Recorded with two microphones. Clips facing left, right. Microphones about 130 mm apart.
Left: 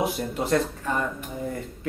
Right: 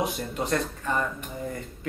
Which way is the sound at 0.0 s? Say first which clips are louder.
Left 2 dB; 5° left (ahead or behind).